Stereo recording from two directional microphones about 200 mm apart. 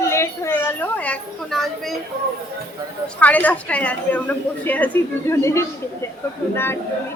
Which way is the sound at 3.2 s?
10° left (ahead or behind).